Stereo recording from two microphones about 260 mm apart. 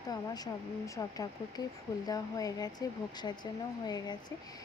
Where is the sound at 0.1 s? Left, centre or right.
Centre.